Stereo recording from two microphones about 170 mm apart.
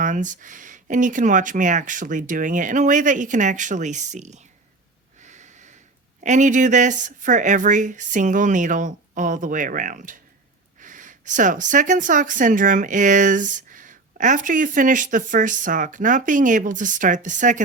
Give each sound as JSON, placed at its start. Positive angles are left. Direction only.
{"t": 0.0, "sound": "speech", "side_deg": -50}
{"t": 5.2, "sound": "snort", "side_deg": -45}
{"t": 6.2, "sound": "speech", "side_deg": -45}